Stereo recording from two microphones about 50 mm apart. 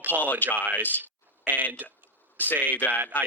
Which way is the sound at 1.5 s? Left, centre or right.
Right.